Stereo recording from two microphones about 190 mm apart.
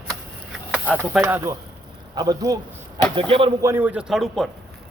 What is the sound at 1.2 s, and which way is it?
A man's voice, 15° right (ahead or behind).